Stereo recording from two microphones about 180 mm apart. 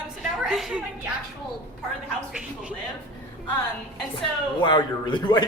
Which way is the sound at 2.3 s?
5° right (ahead or behind).